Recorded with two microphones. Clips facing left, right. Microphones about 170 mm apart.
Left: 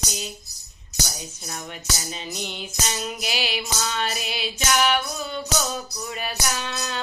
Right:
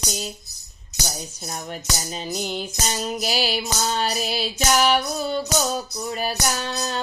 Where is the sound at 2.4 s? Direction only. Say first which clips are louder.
Right 3 dB; 40° right (ahead or behind).